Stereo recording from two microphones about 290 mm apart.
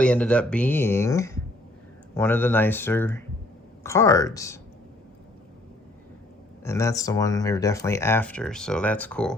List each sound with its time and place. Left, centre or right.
0.0 s speech: centre
6.7 s speech: centre